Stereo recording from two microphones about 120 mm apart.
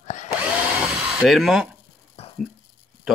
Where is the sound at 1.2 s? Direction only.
Centre (ahead or behind).